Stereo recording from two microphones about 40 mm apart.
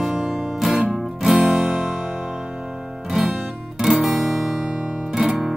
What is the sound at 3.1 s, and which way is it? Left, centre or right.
Music, centre.